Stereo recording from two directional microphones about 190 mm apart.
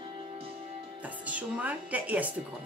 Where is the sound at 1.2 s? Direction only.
10° right (ahead or behind).